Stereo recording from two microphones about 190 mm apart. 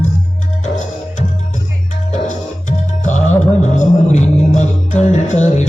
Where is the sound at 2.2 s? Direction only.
40° left (ahead or behind).